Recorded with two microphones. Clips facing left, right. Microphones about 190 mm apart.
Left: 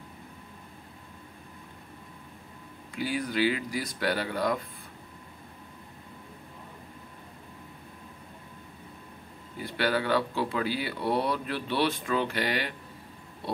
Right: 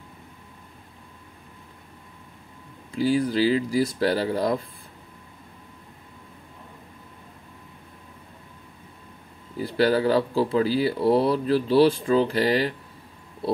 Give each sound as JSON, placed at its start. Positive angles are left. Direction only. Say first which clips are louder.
{"t": 2.9, "sound": "speech", "louder": "right 9 dB", "side_deg": -30}
{"t": 9.6, "sound": "speech", "louder": "right 7 dB", "side_deg": -35}